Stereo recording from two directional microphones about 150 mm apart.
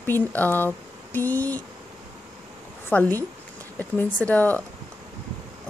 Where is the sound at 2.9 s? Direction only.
10° left (ahead or behind).